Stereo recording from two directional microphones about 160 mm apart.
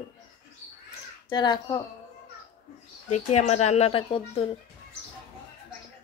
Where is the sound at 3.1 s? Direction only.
45° left (ahead or behind).